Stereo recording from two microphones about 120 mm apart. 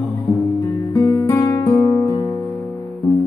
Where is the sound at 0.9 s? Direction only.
25° left (ahead or behind).